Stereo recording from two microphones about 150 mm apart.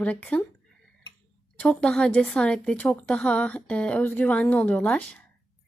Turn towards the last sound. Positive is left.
turn(degrees=10)  # may be behind; listen again after turning